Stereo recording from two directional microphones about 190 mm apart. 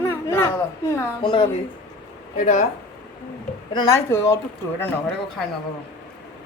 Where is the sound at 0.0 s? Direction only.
10° left (ahead or behind).